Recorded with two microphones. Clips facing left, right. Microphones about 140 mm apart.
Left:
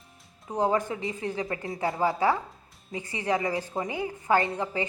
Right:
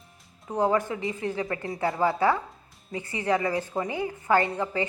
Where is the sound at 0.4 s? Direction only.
20° left (ahead or behind).